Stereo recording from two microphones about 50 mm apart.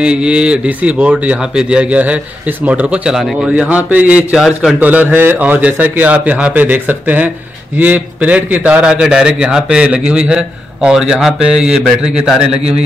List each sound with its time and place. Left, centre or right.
0.0 s a man's voice: right
1.4 s a man's voice: centre; by 5.1 s right
5.1 s speech: right
5.4 s a man's voice: right
8.8 s a man's voice: centre